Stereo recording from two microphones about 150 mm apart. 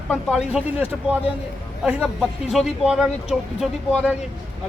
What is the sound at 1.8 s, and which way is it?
Speech, 5° right (ahead or behind).